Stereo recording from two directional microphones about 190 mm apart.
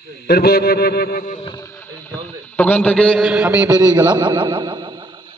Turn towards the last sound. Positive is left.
turn(degrees=-25)  # may be behind; listen again after turning